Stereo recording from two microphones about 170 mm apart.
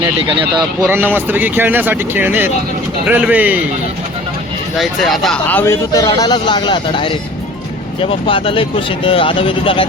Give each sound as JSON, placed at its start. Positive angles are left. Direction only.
{"t": 0.2, "sound": "speech", "side_deg": -30}
{"t": 0.9, "sound": "speech", "side_deg": -10}
{"t": 4.8, "sound": "speech", "side_deg": 0}
{"t": 8.3, "sound": "speech", "side_deg": 30}